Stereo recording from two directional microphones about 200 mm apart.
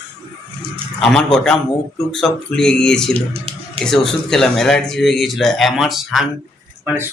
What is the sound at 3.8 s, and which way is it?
Speech, 5° left (ahead or behind).